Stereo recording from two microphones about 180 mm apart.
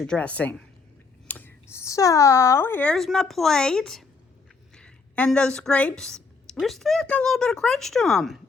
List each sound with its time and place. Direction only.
0.0 s speech: 5° left (ahead or behind)
4.7 s a sound: 5° left (ahead or behind)
5.5 s a woman's voice: 5° left (ahead or behind)